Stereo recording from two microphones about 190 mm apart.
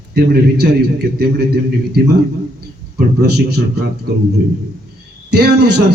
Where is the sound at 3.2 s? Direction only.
60° right (ahead or behind).